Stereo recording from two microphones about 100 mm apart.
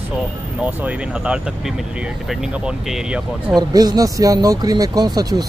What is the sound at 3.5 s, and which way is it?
Speech, 40° right (ahead or behind).